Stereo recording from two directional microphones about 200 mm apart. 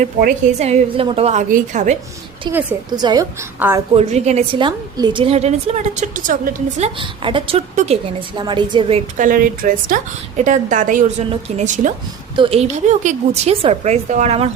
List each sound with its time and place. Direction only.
0.0 s a woman's voice: 45° right (ahead or behind)
0.6 s a woman's voice: 30° right (ahead or behind)
2.5 s a woman's voice: 10° right (ahead or behind)
2.9 s a woman's voice: 20° right (ahead or behind)
3.6 s a woman's voice: 10° right (ahead or behind)
3.9 s a woman's voice: 35° right (ahead or behind)
9.1 s a woman's voice: 40° right (ahead or behind)